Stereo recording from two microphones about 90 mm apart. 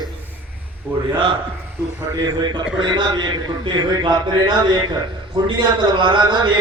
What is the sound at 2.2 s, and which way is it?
A man's voice, 55° right (ahead or behind).